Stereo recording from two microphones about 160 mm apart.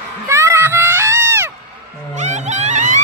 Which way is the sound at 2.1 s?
50° right (ahead or behind).